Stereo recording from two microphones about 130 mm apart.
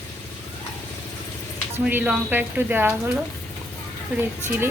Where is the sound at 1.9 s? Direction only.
10° right (ahead or behind).